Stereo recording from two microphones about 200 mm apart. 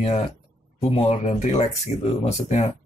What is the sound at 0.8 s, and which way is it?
Speech, 30° left (ahead or behind).